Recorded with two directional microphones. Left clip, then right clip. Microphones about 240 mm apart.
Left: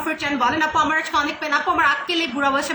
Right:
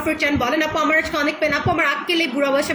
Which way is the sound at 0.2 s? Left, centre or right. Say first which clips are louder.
Left 1 dB; centre.